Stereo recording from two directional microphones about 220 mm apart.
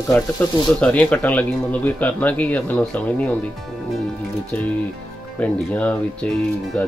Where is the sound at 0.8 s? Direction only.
5° left (ahead or behind).